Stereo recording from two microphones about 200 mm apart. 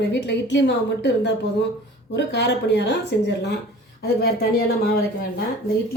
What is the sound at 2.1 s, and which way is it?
Speech, 60° left (ahead or behind).